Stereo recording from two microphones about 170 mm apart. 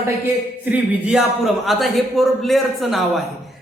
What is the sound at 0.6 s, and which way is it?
A man's voice, 5° right (ahead or behind).